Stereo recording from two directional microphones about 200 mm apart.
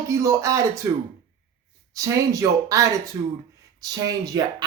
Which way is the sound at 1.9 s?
15° right (ahead or behind).